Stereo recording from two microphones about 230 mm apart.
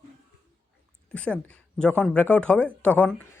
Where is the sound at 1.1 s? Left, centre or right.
Centre.